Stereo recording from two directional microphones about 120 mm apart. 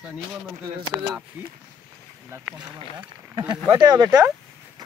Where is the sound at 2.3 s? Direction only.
15° right (ahead or behind).